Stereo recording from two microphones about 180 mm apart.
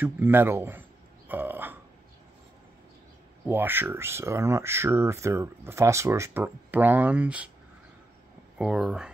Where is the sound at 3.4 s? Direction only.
10° right (ahead or behind).